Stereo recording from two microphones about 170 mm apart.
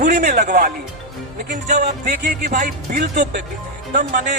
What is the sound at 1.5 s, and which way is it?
Speech, 45° right (ahead or behind).